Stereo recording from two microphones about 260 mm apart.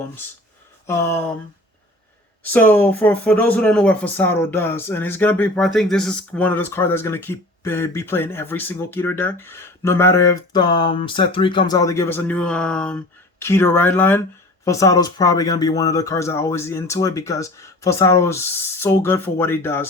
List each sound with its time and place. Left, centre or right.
0.9 s speech: centre
2.4 s speech: centre